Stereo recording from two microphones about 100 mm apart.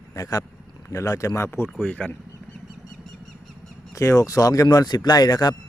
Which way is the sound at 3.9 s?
30° left (ahead or behind).